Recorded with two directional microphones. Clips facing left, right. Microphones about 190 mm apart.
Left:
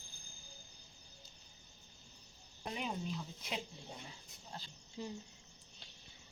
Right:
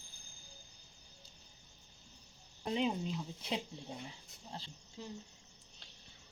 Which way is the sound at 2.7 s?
25° right (ahead or behind).